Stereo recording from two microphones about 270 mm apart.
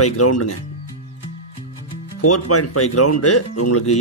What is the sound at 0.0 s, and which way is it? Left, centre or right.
Speech, left.